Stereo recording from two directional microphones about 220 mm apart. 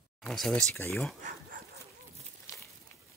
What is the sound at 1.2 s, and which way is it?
Speech, 40° right (ahead or behind).